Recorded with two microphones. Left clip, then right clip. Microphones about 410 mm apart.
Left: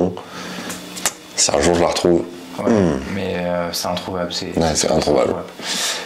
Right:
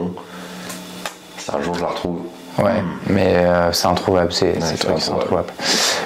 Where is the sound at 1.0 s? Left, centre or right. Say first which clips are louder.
Left 10 dB; left.